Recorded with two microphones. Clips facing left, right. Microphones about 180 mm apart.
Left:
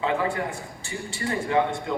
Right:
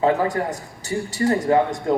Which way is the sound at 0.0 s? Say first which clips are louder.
Right 6 dB; 40° right (ahead or behind).